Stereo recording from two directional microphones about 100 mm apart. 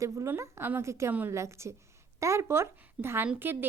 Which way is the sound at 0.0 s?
30° right (ahead or behind).